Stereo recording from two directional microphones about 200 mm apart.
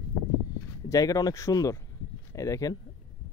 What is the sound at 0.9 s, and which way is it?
Speech, 15° left (ahead or behind).